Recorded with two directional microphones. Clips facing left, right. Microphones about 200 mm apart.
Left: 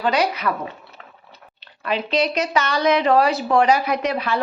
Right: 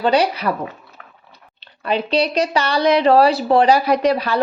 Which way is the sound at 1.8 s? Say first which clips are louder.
Right 3 dB; 30° right (ahead or behind).